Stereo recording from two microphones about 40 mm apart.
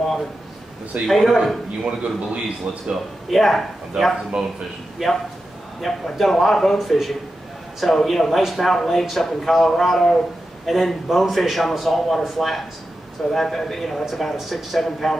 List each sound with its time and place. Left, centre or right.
1.0 s a man's voice: centre
1.8 s a man's voice: right
3.3 s a man's voice: centre
3.9 s a man's voice: centre
5.0 s a man's voice: centre